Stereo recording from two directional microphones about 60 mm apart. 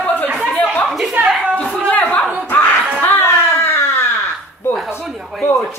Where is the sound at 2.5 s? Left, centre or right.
Left.